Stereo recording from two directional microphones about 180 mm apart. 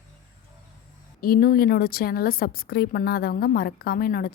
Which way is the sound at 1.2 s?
55° left (ahead or behind).